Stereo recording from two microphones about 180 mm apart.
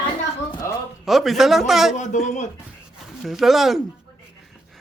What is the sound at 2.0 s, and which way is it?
Speech, 40° left (ahead or behind).